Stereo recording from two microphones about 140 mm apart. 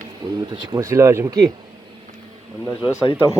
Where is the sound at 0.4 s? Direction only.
35° right (ahead or behind).